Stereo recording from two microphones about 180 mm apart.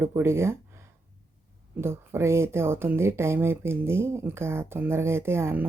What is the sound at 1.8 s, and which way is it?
Speech, 15° right (ahead or behind).